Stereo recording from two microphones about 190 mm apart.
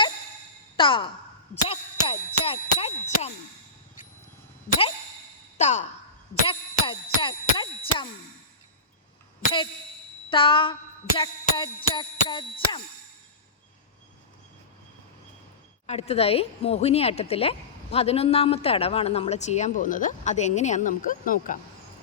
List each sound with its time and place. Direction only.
0.8 s speech: 25° left (ahead or behind)
1.7 s a sound: 30° left (ahead or behind)
5.5 s sigh: 40° left (ahead or behind)
6.5 s music: 25° left (ahead or behind)
10.2 s music: 25° left (ahead or behind)
15.9 s a woman's voice: 35° left (ahead or behind)